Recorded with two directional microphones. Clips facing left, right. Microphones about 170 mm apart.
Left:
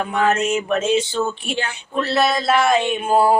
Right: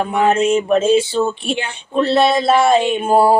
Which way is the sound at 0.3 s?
30° right (ahead or behind).